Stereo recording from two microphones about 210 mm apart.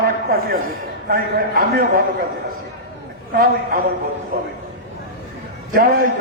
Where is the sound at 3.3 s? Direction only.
45° right (ahead or behind).